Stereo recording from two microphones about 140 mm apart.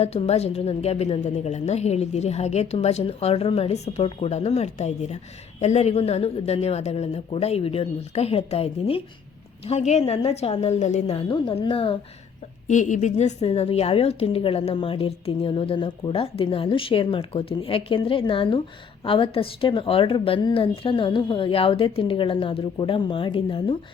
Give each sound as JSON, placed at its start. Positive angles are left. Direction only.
{"t": 0.0, "sound": "a woman's voice", "side_deg": 45}
{"t": 12.6, "sound": "a woman's voice", "side_deg": 60}